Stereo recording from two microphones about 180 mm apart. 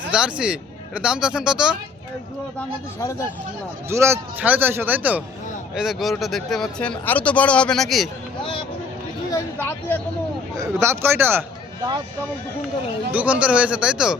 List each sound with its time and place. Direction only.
0.1 s speech: 5° right (ahead or behind)
3.0 s speech: 15° left (ahead or behind)
3.8 s a man's voice: 15° right (ahead or behind)
9.3 s speech: 15° left (ahead or behind)
10.6 s a man's voice: 15° right (ahead or behind)
13.1 s a man's voice: 10° right (ahead or behind)